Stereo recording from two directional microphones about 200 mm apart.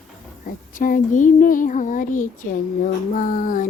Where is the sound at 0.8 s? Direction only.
40° left (ahead or behind).